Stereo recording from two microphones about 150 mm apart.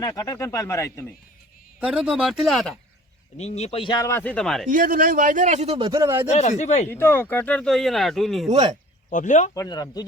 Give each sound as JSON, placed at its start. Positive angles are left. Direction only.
{"t": 0.0, "sound": "speech", "side_deg": 25}
{"t": 1.8, "sound": "speech", "side_deg": -5}
{"t": 3.3, "sound": "speech", "side_deg": 45}
{"t": 3.9, "sound": "speech", "side_deg": 20}
{"t": 4.2, "sound": "speech", "side_deg": 10}
{"t": 4.7, "sound": "a man's voice", "side_deg": -65}
{"t": 6.3, "sound": "speech", "side_deg": 50}
{"t": 6.9, "sound": "speech", "side_deg": 15}
{"t": 8.4, "sound": "speech", "side_deg": -45}
{"t": 9.0, "sound": "speech", "side_deg": 60}
{"t": 9.6, "sound": "speech", "side_deg": 25}